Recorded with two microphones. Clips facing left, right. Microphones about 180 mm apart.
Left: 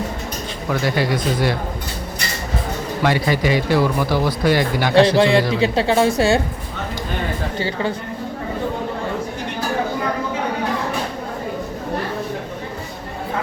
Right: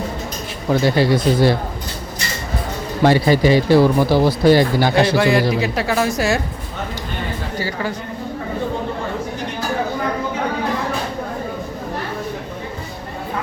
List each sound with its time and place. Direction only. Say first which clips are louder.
0.7 s speech: right 5 dB; 30° right (ahead or behind)
3.0 s speech: right 5 dB; 30° right (ahead or behind)
5.1 s a woman's voice: even; 25° left (ahead or behind)
7.6 s a woman's voice: left 2 dB; 25° left (ahead or behind)